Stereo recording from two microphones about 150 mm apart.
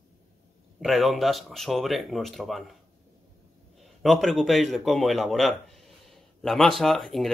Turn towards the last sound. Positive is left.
turn(degrees=0)  # may be behind; listen again after turning